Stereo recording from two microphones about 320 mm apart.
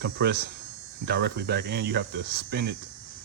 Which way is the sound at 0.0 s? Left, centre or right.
Right.